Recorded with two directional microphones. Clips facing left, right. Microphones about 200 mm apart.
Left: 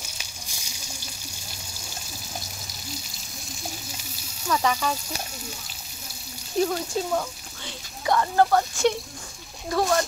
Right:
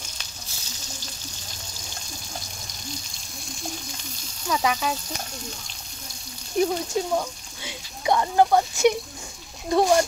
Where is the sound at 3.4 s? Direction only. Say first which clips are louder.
Right 3 dB; centre (ahead or behind).